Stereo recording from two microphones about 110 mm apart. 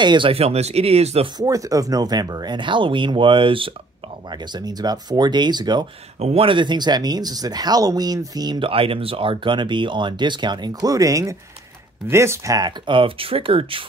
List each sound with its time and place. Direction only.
0.0 s speech: 45° right (ahead or behind)
0.3 s speech: 70° right (ahead or behind)
1.4 s speech: 30° right (ahead or behind); by 3.7 s 50° right (ahead or behind)
4.3 s speech: 40° right (ahead or behind)
6.1 s speech: 80° right
6.4 s speech: 45° right (ahead or behind)
8.5 s speech: 55° right (ahead or behind); by 12.7 s 30° right (ahead or behind)
12.8 s speech: 55° right (ahead or behind)